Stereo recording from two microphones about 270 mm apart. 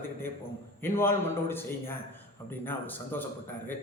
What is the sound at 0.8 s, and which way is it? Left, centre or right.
A man's voice, centre.